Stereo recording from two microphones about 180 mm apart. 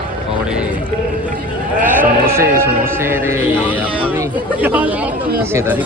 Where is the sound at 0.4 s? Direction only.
5° right (ahead or behind).